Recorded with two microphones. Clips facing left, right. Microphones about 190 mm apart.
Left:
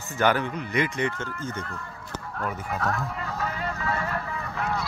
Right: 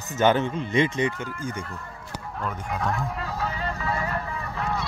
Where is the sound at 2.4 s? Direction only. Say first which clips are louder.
Even; 5° left (ahead or behind).